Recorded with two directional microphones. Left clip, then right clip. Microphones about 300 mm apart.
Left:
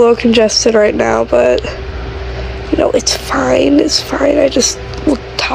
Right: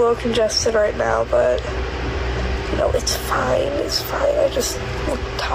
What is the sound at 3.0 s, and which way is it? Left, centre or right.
Speech, left.